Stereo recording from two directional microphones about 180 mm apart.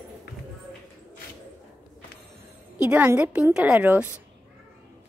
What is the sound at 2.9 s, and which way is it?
Speech, 10° right (ahead or behind).